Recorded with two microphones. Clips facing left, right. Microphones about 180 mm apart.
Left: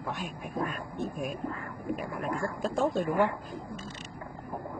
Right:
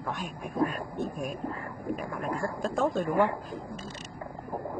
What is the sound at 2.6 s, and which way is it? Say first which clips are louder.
Speech: even; centre (ahead or behind).